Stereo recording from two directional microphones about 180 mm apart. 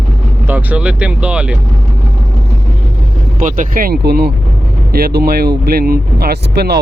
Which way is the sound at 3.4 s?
45° right (ahead or behind).